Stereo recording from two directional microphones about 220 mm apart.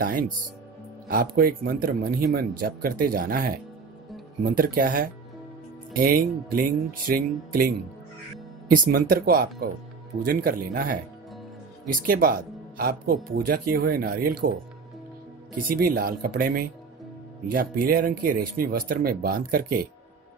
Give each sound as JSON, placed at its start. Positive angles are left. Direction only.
{"t": 0.0, "sound": "a man's voice", "side_deg": -40}
{"t": 15.7, "sound": "a man's voice", "side_deg": -40}